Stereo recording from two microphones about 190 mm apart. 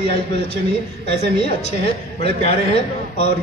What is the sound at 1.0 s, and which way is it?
A man's voice, 35° left (ahead or behind).